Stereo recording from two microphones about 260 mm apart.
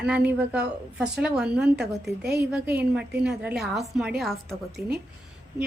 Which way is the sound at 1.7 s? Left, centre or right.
Right.